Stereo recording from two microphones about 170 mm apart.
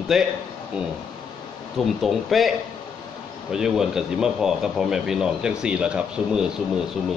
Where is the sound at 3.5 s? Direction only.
5° right (ahead or behind).